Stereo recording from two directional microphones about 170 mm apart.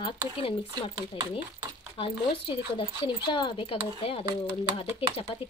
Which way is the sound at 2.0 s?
30° left (ahead or behind).